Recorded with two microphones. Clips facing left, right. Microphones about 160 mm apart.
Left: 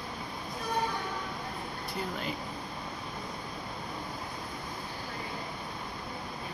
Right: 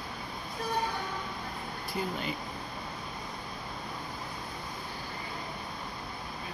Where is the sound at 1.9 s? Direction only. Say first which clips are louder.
Right 2 dB; centre (ahead or behind).